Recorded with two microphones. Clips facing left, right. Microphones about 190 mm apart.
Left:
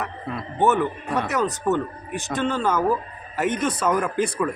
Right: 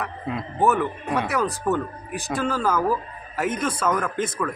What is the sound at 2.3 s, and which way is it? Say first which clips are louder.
A man's voice: left 1 dB; centre (ahead or behind).